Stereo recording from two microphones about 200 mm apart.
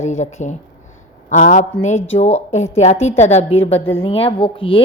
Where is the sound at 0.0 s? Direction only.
35° left (ahead or behind).